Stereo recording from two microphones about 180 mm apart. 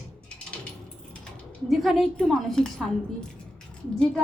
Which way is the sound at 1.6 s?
Centre (ahead or behind).